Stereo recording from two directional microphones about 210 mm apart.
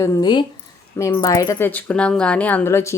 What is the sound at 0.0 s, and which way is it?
Speech, 15° left (ahead or behind).